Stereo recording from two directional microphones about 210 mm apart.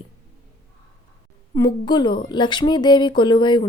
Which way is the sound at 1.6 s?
20° left (ahead or behind).